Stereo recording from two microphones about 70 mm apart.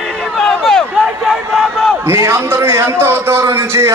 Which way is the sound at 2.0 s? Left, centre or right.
Right.